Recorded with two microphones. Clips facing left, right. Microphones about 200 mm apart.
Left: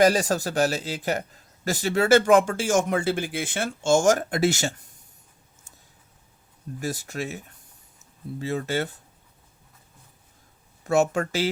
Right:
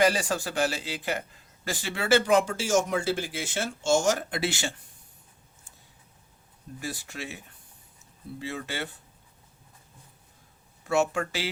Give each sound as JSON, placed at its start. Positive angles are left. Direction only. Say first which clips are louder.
{"t": 0.0, "sound": "speech", "louder": "left 5 dB", "side_deg": 40}
{"t": 6.7, "sound": "speech", "louder": "left 6 dB", "side_deg": 45}
{"t": 10.8, "sound": "speech", "louder": "left 4 dB", "side_deg": 45}